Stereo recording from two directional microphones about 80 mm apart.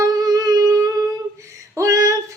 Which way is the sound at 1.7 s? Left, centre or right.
Right.